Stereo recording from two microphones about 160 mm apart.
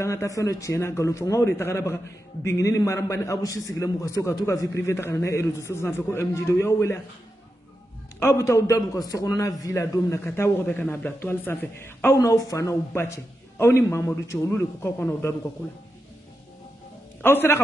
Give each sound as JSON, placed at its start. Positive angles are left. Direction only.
{"t": 0.0, "sound": "a man's voice", "side_deg": 20}
{"t": 8.2, "sound": "a man's voice", "side_deg": 15}
{"t": 17.2, "sound": "a man's voice", "side_deg": 15}